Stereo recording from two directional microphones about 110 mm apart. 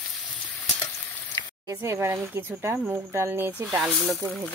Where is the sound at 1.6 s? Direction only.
25° right (ahead or behind).